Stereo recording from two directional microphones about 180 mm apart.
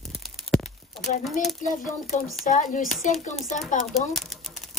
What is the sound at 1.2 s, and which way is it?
Speech, centre (ahead or behind).